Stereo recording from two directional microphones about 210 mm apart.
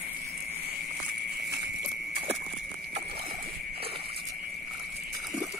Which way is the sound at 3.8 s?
25° right (ahead or behind).